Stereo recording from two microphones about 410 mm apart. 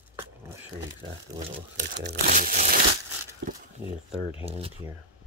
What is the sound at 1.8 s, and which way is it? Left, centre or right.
Speech, right.